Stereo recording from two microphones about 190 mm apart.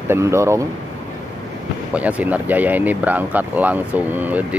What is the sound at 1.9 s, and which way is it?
Speech, 5° right (ahead or behind).